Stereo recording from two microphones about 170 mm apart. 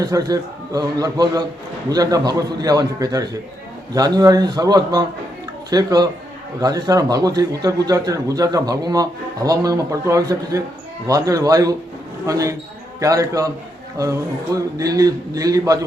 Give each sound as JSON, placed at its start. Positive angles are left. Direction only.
{"t": 0.0, "sound": "speech", "side_deg": -20}